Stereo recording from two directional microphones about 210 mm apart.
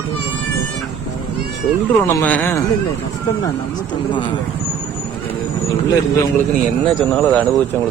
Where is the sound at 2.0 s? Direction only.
10° left (ahead or behind).